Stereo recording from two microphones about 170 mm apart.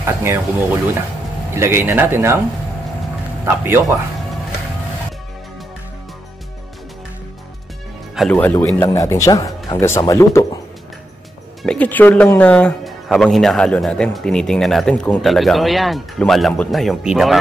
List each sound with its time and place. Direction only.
0.0 s speech: 15° right (ahead or behind)
3.4 s speech: 10° right (ahead or behind)
8.3 s speech: 10° left (ahead or behind)
8.5 s a man's voice: 20° left (ahead or behind)
11.6 s speech: 5° left (ahead or behind)